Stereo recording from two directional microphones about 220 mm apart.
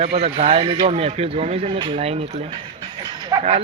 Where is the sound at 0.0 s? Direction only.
30° right (ahead or behind).